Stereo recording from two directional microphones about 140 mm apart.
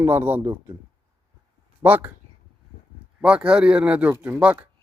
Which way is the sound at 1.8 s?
10° right (ahead or behind).